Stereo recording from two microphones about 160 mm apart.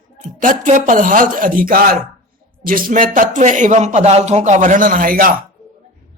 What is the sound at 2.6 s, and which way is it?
Speech, 60° right (ahead or behind).